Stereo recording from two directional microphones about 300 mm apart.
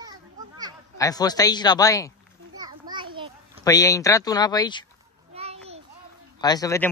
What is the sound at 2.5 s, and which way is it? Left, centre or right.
Children playing, centre.